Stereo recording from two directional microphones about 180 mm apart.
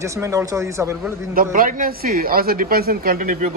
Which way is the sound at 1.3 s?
50° right (ahead or behind).